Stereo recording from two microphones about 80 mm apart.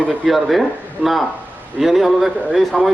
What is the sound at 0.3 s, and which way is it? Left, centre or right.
A man's voice, centre.